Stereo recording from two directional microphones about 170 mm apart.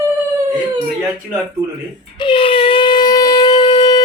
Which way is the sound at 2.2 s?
30° left (ahead or behind).